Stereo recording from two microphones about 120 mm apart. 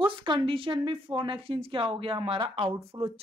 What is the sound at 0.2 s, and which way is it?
A woman's voice, 40° right (ahead or behind).